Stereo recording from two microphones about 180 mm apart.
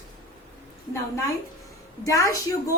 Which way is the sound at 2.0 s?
15° left (ahead or behind).